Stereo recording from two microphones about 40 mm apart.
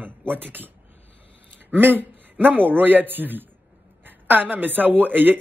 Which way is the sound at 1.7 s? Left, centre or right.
Right.